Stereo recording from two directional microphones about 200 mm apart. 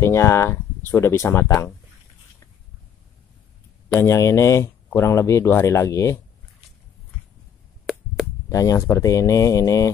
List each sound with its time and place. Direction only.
0.0 s speech: 15° left (ahead or behind)
3.9 s speech: 15° left (ahead or behind)
7.8 s a sound: centre (ahead or behind)
8.5 s speech: 15° left (ahead or behind)